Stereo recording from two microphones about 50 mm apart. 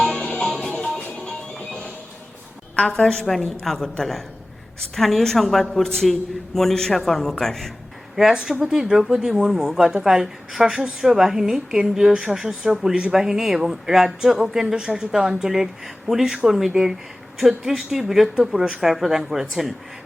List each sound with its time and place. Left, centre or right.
0.2 s music: left
0.4 s music: centre
0.9 s music: left
2.7 s a woman's voice: centre
3.2 s a woman's voice: centre
8.1 s a woman's voice: centre